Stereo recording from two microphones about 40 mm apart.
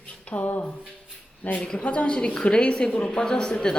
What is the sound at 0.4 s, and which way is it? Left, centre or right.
Speech, left.